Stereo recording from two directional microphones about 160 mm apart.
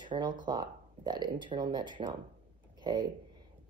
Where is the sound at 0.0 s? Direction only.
30° right (ahead or behind).